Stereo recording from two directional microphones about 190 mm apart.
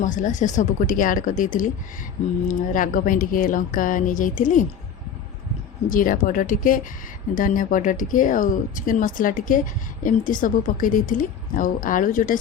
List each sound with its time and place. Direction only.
0.0 s a woman's voice: 40° left (ahead or behind)
5.9 s a woman's voice: 45° left (ahead or behind)